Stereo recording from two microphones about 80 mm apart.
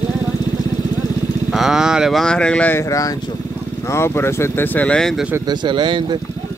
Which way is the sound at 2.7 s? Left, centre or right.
Left.